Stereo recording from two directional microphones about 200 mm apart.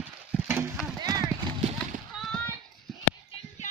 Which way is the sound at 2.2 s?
Centre (ahead or behind).